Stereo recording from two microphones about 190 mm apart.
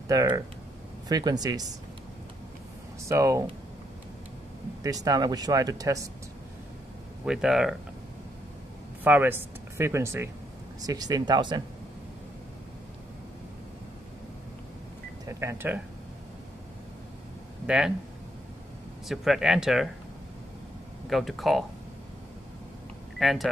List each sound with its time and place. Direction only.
0.1 s speech: 15° right (ahead or behind)
3.1 s speech: 15° right (ahead or behind)
4.8 s speech: 20° right (ahead or behind)
7.2 s speech: 5° right (ahead or behind)
9.0 s speech: 10° right (ahead or behind)
15.2 s speech: 15° right (ahead or behind)
17.6 s speech: 5° right (ahead or behind)
19.0 s speech: centre (ahead or behind)
21.1 s speech: centre (ahead or behind)
23.1 s speech: centre (ahead or behind)